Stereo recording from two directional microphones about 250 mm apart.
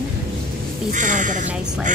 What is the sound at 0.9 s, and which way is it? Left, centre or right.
Speech, right.